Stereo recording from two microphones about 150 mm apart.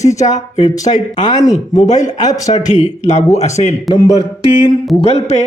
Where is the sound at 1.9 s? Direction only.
50° left (ahead or behind).